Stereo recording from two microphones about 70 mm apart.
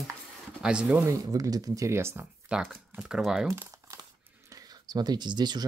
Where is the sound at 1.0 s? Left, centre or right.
Right.